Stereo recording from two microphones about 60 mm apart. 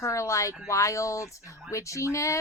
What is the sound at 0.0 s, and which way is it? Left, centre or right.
Speech, left.